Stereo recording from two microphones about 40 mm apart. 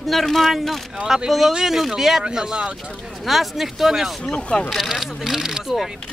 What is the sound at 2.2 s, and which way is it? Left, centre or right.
Speech, right.